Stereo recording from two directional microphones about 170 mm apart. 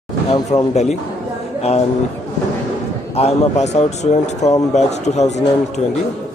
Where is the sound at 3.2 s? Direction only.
40° left (ahead or behind).